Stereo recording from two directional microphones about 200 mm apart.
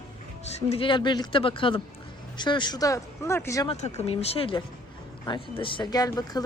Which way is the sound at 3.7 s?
30° left (ahead or behind).